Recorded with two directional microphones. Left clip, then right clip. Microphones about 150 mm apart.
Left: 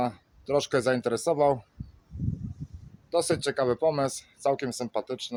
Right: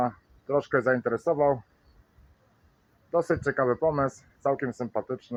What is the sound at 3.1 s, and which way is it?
Speech, 30° left (ahead or behind).